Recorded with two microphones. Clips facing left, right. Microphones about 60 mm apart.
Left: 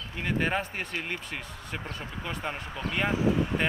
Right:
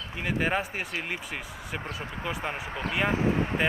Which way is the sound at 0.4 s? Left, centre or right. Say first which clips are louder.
Right 1 dB; centre.